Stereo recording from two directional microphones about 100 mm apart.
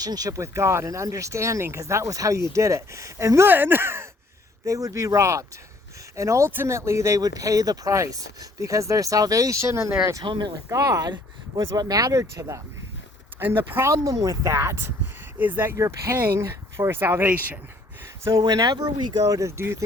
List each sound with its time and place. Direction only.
0.0 s speech: 40° right (ahead or behind)
10.2 s speech: 50° right (ahead or behind)
10.7 s speech: 35° right (ahead or behind)
13.9 s speech: 35° right (ahead or behind); by 17.6 s 20° right (ahead or behind)
18.4 s speech: 40° right (ahead or behind)